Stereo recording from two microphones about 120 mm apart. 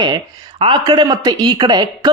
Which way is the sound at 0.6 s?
40° right (ahead or behind).